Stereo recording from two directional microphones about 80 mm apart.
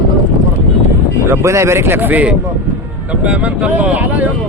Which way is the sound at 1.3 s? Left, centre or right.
Right.